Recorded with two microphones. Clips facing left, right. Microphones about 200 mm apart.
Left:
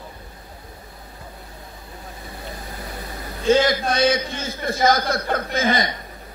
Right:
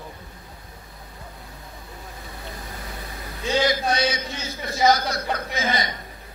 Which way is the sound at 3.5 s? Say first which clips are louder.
Left 4 dB; 50° left (ahead or behind).